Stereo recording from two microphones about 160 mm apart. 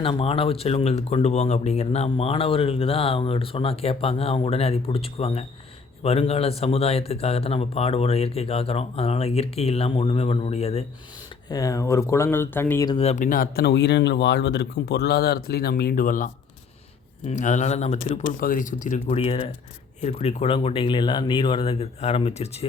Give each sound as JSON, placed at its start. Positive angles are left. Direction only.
{"t": 0.0, "sound": "speech", "side_deg": 35}
{"t": 11.4, "sound": "speech", "side_deg": 20}
{"t": 13.0, "sound": "speech", "side_deg": 45}
{"t": 18.3, "sound": "speech", "side_deg": 60}
{"t": 19.0, "sound": "speech", "side_deg": 35}